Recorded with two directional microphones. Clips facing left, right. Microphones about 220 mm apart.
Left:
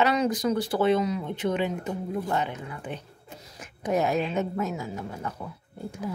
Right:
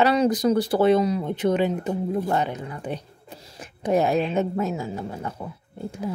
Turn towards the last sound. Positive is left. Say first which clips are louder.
# right 3 dB
turn(degrees=-25)  # may be behind; listen again after turning